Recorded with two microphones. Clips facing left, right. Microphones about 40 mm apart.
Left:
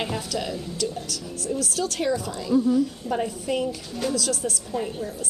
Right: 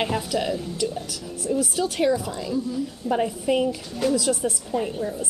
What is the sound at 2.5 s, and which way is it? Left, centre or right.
Speech, left.